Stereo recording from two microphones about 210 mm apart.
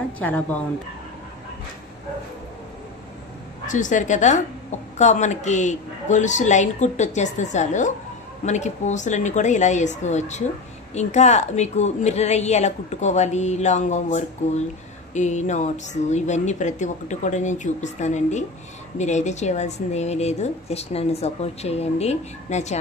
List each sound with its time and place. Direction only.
0.2 s speech: 10° left (ahead or behind)
3.6 s a woman's voice: 35° left (ahead or behind)